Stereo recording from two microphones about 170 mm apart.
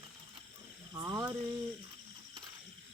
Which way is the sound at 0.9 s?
20° right (ahead or behind).